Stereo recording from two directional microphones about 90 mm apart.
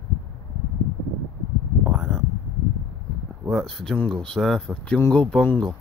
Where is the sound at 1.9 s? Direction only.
Centre (ahead or behind).